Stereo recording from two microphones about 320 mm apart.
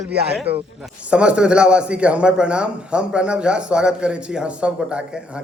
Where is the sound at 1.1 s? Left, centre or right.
Centre.